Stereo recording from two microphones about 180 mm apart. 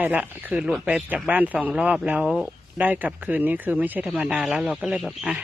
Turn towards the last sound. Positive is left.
turn(degrees=0)  # may be behind; listen again after turning